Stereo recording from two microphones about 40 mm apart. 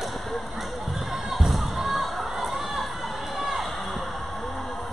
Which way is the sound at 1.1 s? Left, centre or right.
Centre.